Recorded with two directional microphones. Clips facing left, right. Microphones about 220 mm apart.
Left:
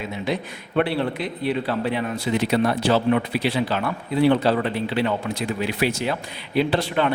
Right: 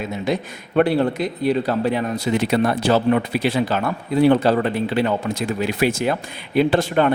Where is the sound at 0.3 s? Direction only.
45° right (ahead or behind).